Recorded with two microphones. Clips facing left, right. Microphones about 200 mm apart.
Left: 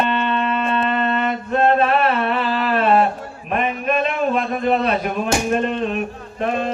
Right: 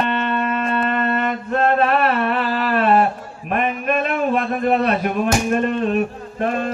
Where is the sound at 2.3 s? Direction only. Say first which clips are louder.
Even; centre (ahead or behind).